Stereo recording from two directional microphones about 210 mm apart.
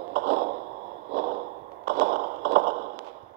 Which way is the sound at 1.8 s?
55° right (ahead or behind).